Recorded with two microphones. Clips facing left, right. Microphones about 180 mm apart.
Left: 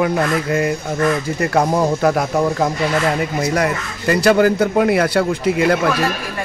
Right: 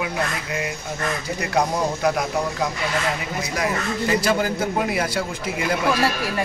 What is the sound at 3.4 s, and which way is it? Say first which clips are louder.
Speech: left 5 dB; 60° left (ahead or behind).